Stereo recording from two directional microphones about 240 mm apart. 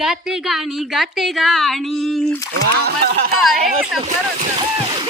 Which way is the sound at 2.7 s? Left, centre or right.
Right.